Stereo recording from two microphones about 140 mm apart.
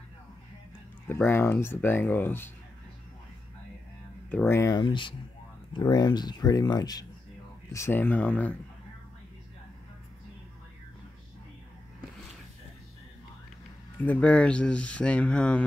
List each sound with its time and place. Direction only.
1.0 s speech: 15° left (ahead or behind)
4.5 s speech: 20° left (ahead or behind)
4.7 s speech: 35° left (ahead or behind)
7.7 s speech: 15° left (ahead or behind)
13.9 s speech: 10° left (ahead or behind)